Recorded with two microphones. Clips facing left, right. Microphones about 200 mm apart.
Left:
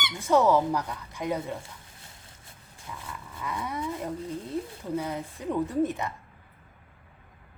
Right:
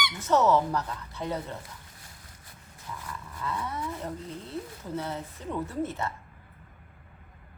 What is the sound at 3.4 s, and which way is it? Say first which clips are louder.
A woman's voice: left 1 dB; 15° left (ahead or behind).